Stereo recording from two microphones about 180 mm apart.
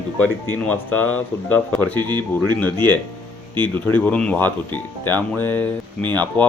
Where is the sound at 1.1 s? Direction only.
10° left (ahead or behind).